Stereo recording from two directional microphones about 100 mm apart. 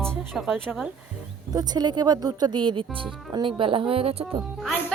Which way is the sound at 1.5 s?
40° right (ahead or behind).